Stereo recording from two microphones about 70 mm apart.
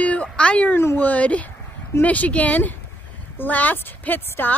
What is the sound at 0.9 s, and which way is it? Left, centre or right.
A woman's voice, left.